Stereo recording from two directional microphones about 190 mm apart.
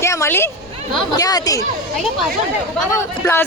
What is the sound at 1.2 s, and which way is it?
Speech, 20° left (ahead or behind).